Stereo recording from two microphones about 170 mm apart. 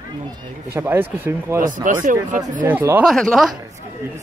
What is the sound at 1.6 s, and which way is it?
Speech, 50° right (ahead or behind).